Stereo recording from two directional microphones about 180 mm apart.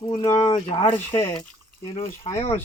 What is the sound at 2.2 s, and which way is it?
Speech, 35° left (ahead or behind).